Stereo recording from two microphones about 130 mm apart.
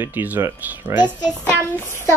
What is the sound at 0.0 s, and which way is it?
Speech, 15° right (ahead or behind).